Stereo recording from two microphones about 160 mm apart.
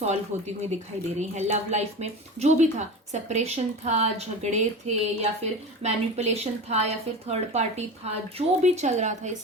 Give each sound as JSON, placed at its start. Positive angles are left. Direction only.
{"t": 0.0, "sound": "a woman's voice", "side_deg": -45}